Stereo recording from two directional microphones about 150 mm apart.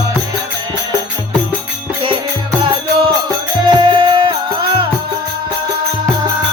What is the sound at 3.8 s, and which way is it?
Music, 35° right (ahead or behind).